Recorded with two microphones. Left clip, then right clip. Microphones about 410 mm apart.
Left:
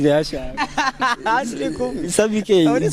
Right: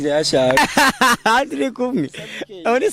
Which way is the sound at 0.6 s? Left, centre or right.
Right.